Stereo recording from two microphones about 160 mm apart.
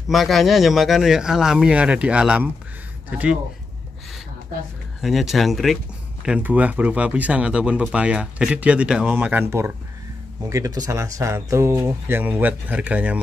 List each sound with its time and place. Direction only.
0.1 s speech: centre (ahead or behind)
5.0 s speech: centre (ahead or behind)